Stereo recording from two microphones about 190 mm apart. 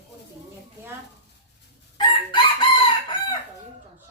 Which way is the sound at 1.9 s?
25° left (ahead or behind).